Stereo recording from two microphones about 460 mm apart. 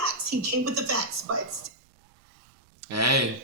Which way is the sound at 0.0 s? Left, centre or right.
Right.